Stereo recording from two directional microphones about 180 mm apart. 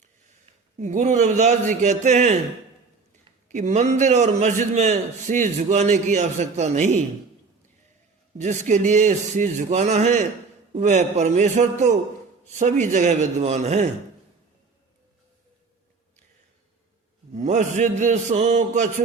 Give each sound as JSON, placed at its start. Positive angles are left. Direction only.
{"t": 0.8, "sound": "a man's voice", "side_deg": -40}
{"t": 8.4, "sound": "a man's voice", "side_deg": -40}
{"t": 17.3, "sound": "a man's voice", "side_deg": -40}